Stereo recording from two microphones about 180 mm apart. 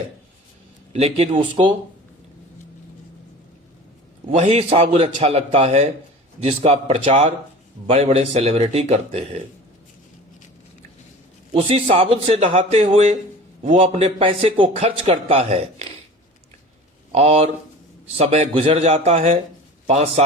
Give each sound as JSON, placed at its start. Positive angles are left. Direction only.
{"t": 0.9, "sound": "a man's voice", "side_deg": -35}
{"t": 4.4, "sound": "a man's voice", "side_deg": -35}
{"t": 11.5, "sound": "a man's voice", "side_deg": -30}
{"t": 17.1, "sound": "a man's voice", "side_deg": -35}